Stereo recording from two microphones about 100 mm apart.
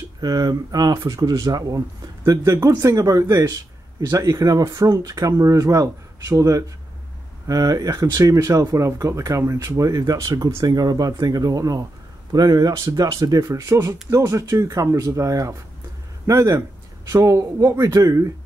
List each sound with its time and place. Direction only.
0.2 s speech: 40° right (ahead or behind)